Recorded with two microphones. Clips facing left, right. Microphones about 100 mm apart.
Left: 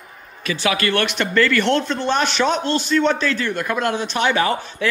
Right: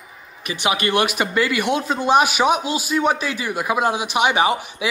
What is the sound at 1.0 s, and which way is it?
Speech, 10° right (ahead or behind).